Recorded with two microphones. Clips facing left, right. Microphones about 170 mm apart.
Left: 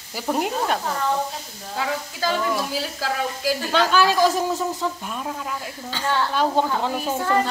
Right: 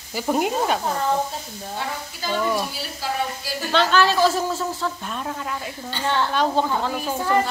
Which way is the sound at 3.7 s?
10° left (ahead or behind).